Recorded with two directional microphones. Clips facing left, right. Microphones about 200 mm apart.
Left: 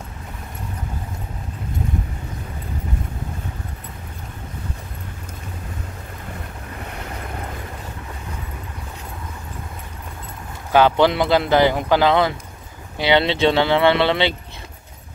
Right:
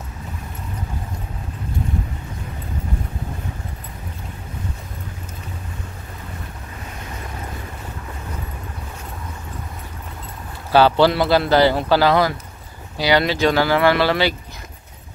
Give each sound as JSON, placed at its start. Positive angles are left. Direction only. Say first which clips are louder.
{"t": 11.0, "sound": "speech", "louder": "right 1 dB", "side_deg": 20}